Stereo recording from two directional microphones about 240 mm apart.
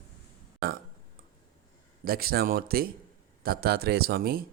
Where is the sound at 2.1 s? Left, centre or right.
Right.